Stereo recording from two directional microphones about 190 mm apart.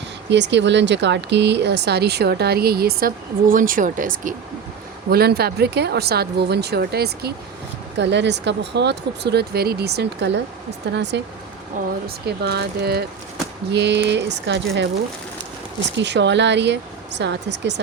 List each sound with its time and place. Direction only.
0.3 s speech: 65° right (ahead or behind); by 4.4 s 45° right (ahead or behind)
5.1 s speech: 55° right (ahead or behind)
7.9 s speech: 70° right (ahead or behind)
16.0 s speech: 65° right (ahead or behind)